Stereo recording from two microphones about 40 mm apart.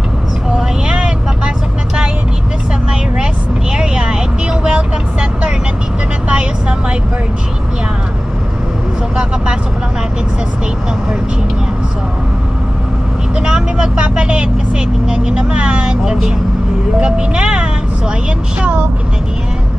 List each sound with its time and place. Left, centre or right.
0.8 s vehicle: right
3.7 s vehicle: right
13.4 s vehicle: right
17.0 s vehicle: right